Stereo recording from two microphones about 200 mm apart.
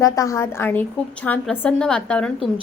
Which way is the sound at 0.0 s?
15° left (ahead or behind).